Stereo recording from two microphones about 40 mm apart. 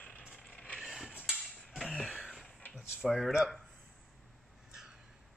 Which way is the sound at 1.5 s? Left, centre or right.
Centre.